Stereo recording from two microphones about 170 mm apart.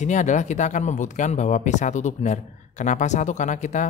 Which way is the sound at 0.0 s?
45° left (ahead or behind).